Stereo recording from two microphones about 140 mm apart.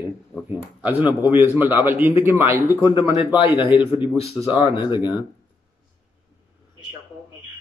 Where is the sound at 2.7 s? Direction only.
35° left (ahead or behind).